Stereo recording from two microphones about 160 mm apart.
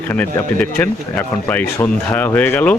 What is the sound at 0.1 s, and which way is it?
Speech, 10° left (ahead or behind).